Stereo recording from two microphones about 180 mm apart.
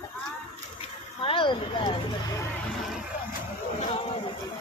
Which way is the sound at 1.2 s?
30° left (ahead or behind).